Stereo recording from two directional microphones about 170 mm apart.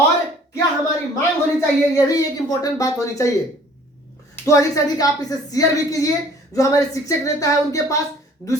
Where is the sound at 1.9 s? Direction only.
20° left (ahead or behind).